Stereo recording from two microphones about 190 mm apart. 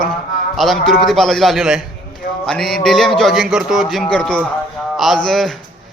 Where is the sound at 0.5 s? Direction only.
Centre (ahead or behind).